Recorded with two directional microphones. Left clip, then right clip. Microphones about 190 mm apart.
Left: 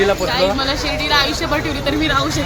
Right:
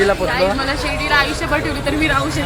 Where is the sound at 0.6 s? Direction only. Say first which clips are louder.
Left 1 dB; 20° left (ahead or behind).